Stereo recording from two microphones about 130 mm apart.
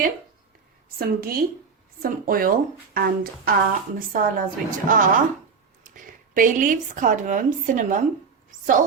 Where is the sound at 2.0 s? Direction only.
90° right.